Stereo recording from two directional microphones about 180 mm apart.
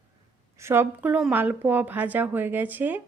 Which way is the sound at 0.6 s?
15° right (ahead or behind).